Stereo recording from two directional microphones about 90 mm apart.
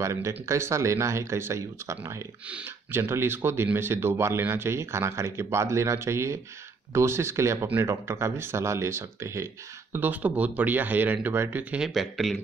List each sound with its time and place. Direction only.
0.0 s speech: 35° right (ahead or behind)
2.4 s speech: 15° right (ahead or behind)
2.9 s speech: 25° right (ahead or behind)
9.9 s speech: 20° right (ahead or behind)
11.7 s speech: 5° right (ahead or behind)